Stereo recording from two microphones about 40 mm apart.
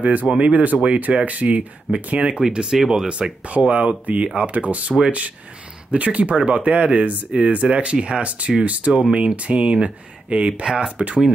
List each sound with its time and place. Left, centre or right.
0.0 s speech: right
2.1 s speech: right